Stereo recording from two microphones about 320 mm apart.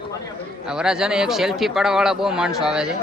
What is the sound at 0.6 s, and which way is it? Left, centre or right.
Speech, centre.